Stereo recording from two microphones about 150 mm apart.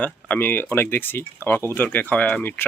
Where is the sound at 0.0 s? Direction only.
10° left (ahead or behind).